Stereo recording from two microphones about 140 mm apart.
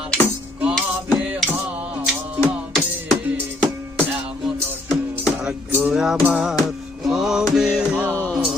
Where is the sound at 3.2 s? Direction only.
10° right (ahead or behind).